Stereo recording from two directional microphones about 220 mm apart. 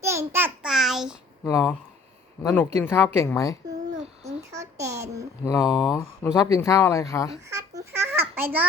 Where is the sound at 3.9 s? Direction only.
30° right (ahead or behind).